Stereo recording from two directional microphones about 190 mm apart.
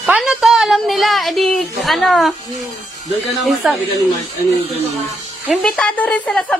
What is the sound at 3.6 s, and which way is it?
Speech, 5° right (ahead or behind).